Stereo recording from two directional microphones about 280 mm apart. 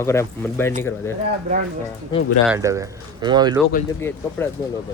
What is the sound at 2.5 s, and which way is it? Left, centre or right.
Speech, centre.